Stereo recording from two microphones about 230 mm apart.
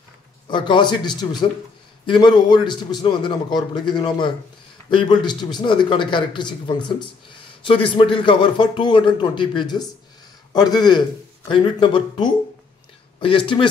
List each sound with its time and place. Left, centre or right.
0.5 s a man's voice: left